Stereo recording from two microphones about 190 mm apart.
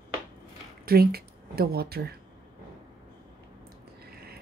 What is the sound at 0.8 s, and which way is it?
Speech, 55° right (ahead or behind).